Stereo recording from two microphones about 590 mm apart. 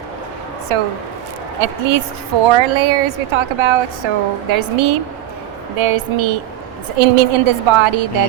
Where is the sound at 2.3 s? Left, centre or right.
Right.